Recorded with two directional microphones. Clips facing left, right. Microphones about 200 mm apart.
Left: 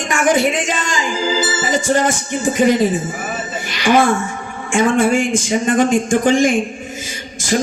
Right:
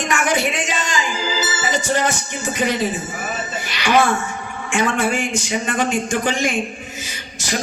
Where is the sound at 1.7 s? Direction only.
50° left (ahead or behind).